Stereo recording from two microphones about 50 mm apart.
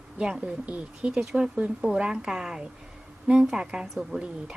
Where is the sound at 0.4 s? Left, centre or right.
Right.